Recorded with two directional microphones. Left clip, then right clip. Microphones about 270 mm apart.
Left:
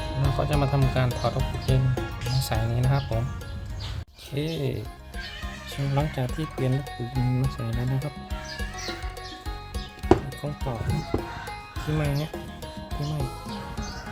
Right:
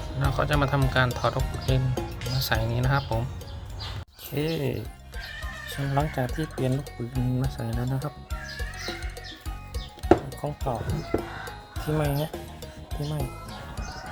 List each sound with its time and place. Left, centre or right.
0.2 s speech: centre
4.4 s speech: centre
5.9 s speech: centre
10.1 s speech: centre